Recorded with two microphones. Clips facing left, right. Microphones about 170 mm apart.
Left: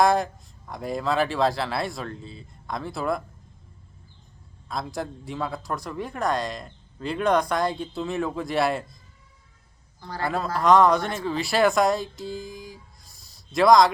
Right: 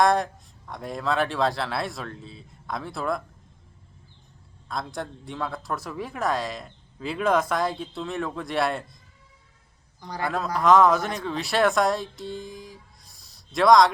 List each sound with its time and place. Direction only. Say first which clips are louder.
0.0 s speech: left 1 dB; centre (ahead or behind)
4.7 s speech: left 1 dB; centre (ahead or behind)
10.0 s a man's voice: even; 15° right (ahead or behind)
10.2 s speech: even; centre (ahead or behind)